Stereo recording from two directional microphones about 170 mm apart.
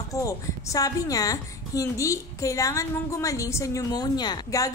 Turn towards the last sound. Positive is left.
turn(degrees=20)  # may be behind; listen again after turning